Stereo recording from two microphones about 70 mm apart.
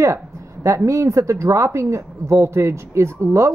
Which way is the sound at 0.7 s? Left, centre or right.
Right.